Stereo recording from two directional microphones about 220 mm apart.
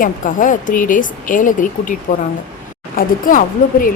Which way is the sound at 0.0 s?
35° left (ahead or behind).